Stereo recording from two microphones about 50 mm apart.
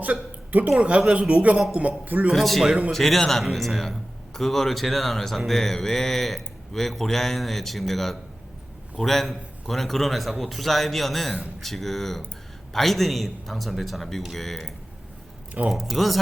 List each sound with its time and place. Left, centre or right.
0.0 s a sound: right
0.8 s a man's voice: right
2.3 s a man's voice: centre
15.6 s speech: right
15.9 s a man's voice: centre